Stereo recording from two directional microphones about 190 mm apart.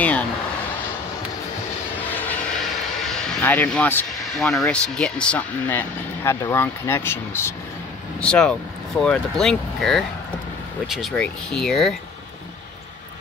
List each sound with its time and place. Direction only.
2.0 s vehicle: 10° left (ahead or behind)
3.1 s speech: 5° left (ahead or behind)